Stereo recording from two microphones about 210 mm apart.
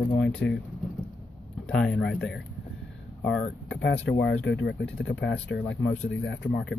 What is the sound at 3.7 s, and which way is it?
Speech, 55° left (ahead or behind).